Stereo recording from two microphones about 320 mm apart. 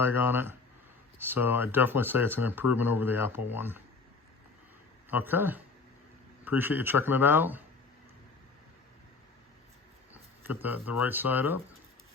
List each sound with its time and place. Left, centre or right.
0.0 s speech: centre
5.1 s speech: centre
10.4 s speech: centre